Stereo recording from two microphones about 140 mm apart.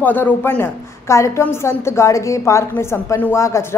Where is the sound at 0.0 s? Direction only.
15° left (ahead or behind).